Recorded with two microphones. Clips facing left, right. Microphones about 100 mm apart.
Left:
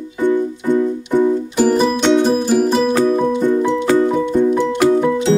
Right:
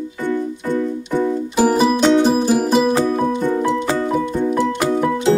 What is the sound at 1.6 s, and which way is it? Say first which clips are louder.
Music: right 1 dB; 10° right (ahead or behind).